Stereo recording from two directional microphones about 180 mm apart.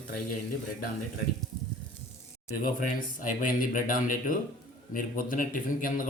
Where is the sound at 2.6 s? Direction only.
50° left (ahead or behind).